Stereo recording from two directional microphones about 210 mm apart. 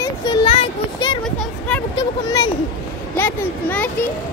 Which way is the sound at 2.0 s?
20° left (ahead or behind).